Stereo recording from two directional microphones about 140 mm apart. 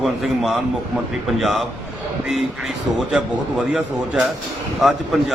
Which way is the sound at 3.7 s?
5° right (ahead or behind).